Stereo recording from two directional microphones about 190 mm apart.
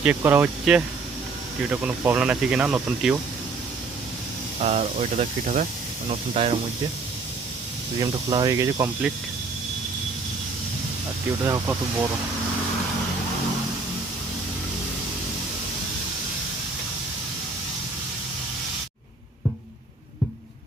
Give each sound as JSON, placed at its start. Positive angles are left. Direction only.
{"t": 0.0, "sound": "speech", "side_deg": -10}
{"t": 4.6, "sound": "speech", "side_deg": -35}
{"t": 7.9, "sound": "speech", "side_deg": -20}